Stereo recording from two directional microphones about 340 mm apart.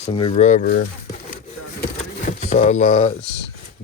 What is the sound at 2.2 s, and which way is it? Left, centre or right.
Speech, centre.